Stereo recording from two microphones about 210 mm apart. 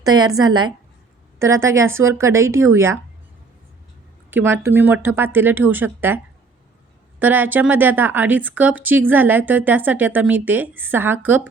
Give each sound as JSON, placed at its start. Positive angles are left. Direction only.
{"t": 0.0, "sound": "a woman's voice", "side_deg": -20}
{"t": 4.5, "sound": "speech", "side_deg": -10}
{"t": 7.2, "sound": "speech", "side_deg": -10}